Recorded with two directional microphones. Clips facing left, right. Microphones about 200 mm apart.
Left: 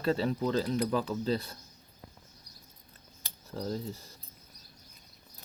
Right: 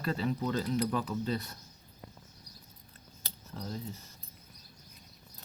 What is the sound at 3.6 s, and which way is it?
Speech, 35° left (ahead or behind).